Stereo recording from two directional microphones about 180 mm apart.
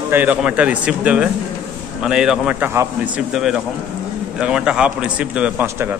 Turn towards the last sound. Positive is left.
turn(degrees=-10)  # may be behind; listen again after turning